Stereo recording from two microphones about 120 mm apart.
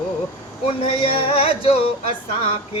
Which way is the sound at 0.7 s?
50° left (ahead or behind).